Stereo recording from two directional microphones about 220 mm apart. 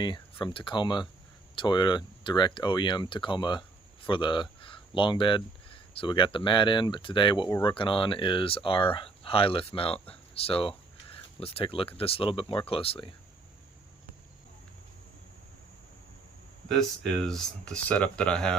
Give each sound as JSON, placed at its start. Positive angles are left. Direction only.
{"t": 0.0, "sound": "speech", "side_deg": 20}
{"t": 16.6, "sound": "speech", "side_deg": 0}